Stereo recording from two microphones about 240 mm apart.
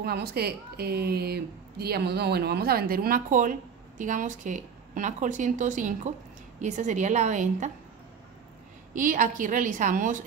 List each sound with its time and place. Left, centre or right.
0.0 s a woman's voice: right
8.9 s a woman's voice: right